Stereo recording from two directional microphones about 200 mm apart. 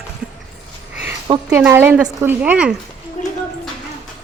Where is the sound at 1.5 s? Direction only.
10° right (ahead or behind).